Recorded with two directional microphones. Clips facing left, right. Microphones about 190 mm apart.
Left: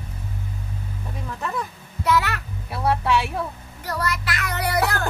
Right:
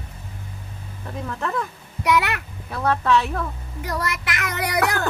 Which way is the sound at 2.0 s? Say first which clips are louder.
Right 1 dB; 15° right (ahead or behind).